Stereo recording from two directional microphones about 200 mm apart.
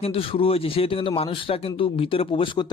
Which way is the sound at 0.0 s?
30° left (ahead or behind).